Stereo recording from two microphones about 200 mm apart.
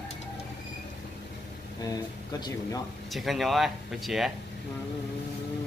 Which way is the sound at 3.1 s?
Centre (ahead or behind).